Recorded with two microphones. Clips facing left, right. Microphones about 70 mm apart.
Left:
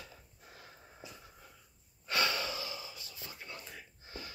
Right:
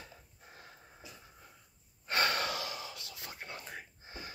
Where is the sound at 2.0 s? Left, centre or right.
Right.